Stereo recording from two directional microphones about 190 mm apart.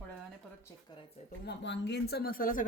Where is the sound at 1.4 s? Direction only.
65° left (ahead or behind); by 2.6 s 45° left (ahead or behind).